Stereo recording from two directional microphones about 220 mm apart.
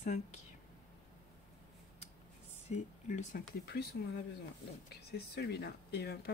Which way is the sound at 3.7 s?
45° left (ahead or behind).